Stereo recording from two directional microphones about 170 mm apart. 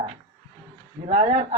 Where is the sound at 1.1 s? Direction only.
40° right (ahead or behind).